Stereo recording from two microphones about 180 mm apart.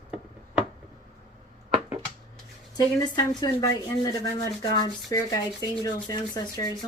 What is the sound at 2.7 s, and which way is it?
Speech, 20° left (ahead or behind).